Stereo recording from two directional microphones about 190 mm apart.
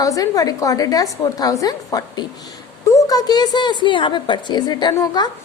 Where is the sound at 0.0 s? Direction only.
20° left (ahead or behind).